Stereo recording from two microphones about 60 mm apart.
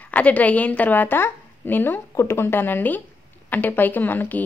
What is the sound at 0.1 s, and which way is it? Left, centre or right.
A woman's voice, left.